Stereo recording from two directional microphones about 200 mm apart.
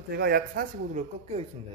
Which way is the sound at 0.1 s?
55° right (ahead or behind).